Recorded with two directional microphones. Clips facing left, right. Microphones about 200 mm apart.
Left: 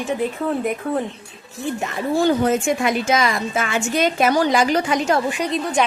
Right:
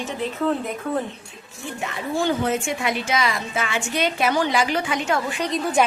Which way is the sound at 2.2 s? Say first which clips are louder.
Left 5 dB; 45° left (ahead or behind).